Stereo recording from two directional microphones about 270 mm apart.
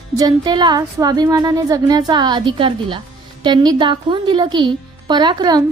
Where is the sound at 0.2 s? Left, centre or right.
Centre.